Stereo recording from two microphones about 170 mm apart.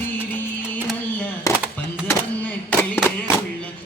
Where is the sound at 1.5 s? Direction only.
20° left (ahead or behind).